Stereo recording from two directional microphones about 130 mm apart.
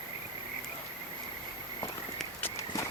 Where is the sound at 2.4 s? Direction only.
25° left (ahead or behind).